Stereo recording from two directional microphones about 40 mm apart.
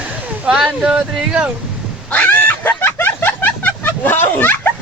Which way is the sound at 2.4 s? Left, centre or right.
Left.